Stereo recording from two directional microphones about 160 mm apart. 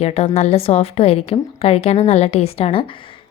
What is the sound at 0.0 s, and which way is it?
A woman's voice, 40° left (ahead or behind).